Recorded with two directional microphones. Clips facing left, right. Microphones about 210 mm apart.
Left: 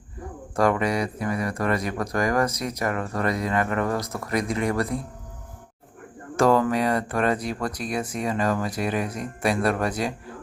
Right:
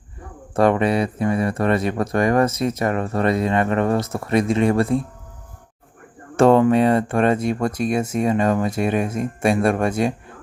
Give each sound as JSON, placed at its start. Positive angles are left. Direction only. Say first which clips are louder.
{"t": 0.5, "sound": "speech", "louder": "right 5 dB", "side_deg": -30}
{"t": 6.3, "sound": "speech", "louder": "right 6 dB", "side_deg": -30}